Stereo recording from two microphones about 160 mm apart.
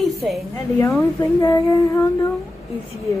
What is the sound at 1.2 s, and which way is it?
Speech, 20° left (ahead or behind).